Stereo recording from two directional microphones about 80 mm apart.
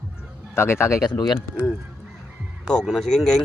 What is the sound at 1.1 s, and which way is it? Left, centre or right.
Speech, left.